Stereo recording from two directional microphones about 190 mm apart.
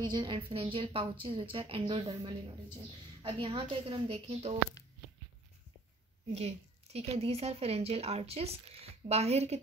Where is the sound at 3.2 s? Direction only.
25° right (ahead or behind).